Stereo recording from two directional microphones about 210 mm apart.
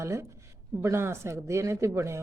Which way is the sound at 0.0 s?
15° right (ahead or behind).